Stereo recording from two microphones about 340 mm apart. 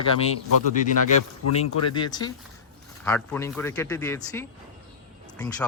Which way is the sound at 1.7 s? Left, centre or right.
Left.